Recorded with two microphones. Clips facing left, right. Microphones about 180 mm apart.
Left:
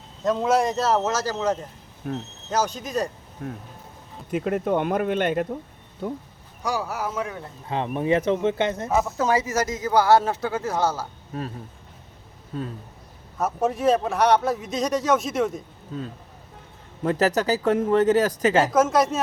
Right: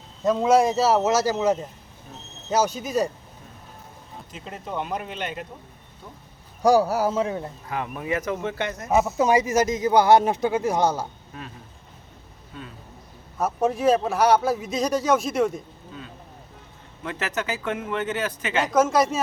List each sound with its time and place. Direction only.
0.3 s a man's voice: centre (ahead or behind)
2.0 s speech: 70° left (ahead or behind)
2.5 s a man's voice: 5° right (ahead or behind)
3.4 s speech: 70° left (ahead or behind); by 5.5 s 50° left (ahead or behind)
6.6 s a man's voice: 35° right (ahead or behind)
7.7 s speech: 30° left (ahead or behind)
9.1 s speech: 15° right (ahead or behind)
11.3 s speech: 40° left (ahead or behind)
12.5 s speech: 40° left (ahead or behind)
13.4 s a man's voice: centre (ahead or behind)
15.9 s speech: 40° left (ahead or behind)
18.7 s a man's voice: centre (ahead or behind)